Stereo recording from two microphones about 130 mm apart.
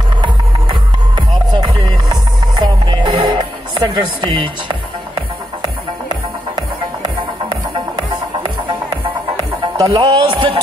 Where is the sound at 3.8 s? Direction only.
40° right (ahead or behind).